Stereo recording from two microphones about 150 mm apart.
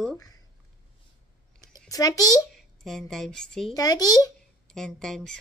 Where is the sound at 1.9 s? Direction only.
25° left (ahead or behind).